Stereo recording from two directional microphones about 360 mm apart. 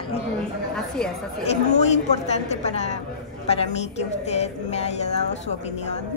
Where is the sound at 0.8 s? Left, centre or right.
Centre.